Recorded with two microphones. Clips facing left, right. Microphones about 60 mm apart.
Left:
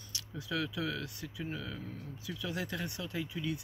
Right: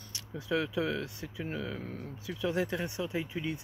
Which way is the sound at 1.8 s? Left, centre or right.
Right.